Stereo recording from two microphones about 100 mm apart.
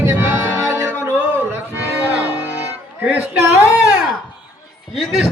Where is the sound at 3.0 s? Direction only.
15° right (ahead or behind).